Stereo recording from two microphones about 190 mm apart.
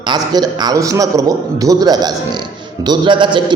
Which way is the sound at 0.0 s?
20° right (ahead or behind).